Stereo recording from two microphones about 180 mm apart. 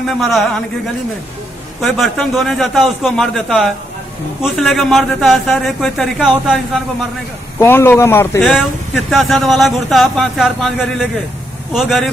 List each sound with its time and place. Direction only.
0.0 s a man's voice: centre (ahead or behind)
1.8 s a man's voice: centre (ahead or behind)
7.5 s a man's voice: 10° left (ahead or behind)
8.4 s a man's voice: centre (ahead or behind)